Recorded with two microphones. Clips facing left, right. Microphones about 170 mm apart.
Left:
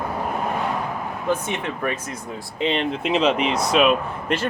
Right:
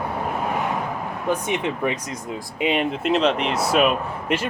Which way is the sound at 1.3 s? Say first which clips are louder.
Right 1 dB; 15° right (ahead or behind).